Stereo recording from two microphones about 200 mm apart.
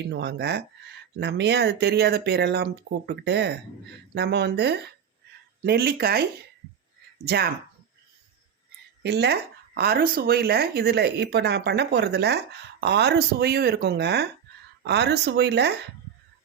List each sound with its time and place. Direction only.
0.1 s speech: 55° right (ahead or behind)
7.3 s speech: 50° right (ahead or behind)
9.0 s speech: 55° right (ahead or behind)